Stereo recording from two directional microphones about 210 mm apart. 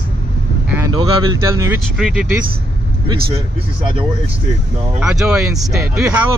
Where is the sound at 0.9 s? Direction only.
20° right (ahead or behind).